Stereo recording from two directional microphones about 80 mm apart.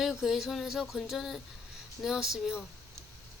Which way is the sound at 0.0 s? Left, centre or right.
Centre.